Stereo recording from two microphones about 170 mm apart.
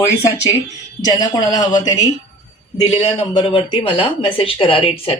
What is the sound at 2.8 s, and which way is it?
Speech, 40° left (ahead or behind).